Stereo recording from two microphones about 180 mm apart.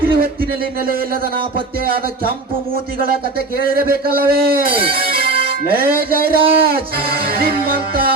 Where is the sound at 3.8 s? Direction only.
55° right (ahead or behind).